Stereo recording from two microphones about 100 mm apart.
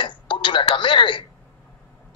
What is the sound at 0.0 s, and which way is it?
A man's voice, 55° left (ahead or behind).